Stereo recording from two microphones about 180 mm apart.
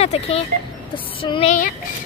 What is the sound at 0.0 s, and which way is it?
A child's voice, 35° left (ahead or behind).